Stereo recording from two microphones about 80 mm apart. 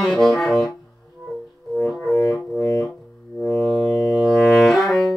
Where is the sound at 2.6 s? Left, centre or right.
Left.